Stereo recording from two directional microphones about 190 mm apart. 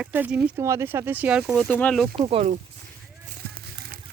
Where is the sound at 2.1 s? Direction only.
30° right (ahead or behind).